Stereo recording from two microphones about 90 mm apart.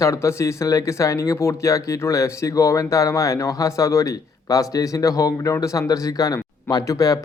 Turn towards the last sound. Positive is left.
turn(degrees=40)  # may be behind; listen again after turning